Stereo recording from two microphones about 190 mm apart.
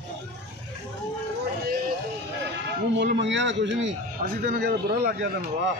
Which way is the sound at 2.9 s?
65° right (ahead or behind).